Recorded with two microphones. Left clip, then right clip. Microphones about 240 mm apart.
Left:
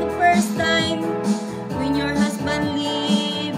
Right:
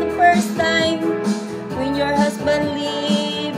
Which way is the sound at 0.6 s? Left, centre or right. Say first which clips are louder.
Right 3 dB; right.